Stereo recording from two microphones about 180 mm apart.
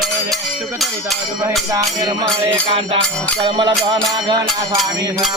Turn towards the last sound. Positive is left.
turn(degrees=-25)  # may be behind; listen again after turning